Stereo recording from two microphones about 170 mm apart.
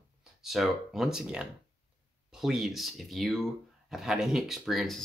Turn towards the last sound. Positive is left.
turn(degrees=0)  # may be behind; listen again after turning